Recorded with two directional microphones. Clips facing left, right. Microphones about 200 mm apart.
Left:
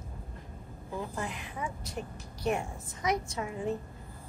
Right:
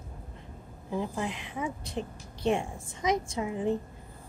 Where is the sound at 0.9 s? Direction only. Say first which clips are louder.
Right 4 dB; 20° right (ahead or behind).